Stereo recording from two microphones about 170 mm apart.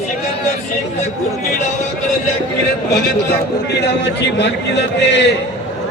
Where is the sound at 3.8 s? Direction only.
85° left.